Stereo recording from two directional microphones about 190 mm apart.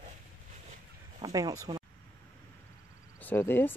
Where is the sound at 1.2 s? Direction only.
20° right (ahead or behind).